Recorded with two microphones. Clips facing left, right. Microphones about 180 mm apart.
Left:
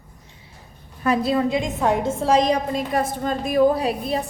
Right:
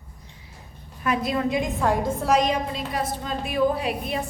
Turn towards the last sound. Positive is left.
turn(degrees=35)  # may be behind; listen again after turning